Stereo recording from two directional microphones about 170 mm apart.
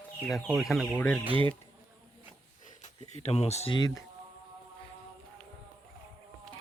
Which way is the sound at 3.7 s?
25° left (ahead or behind).